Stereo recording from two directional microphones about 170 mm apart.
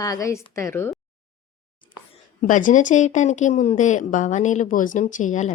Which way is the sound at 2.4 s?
50° left (ahead or behind).